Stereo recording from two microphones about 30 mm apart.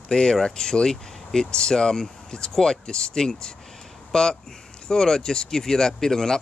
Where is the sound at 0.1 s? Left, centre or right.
Left.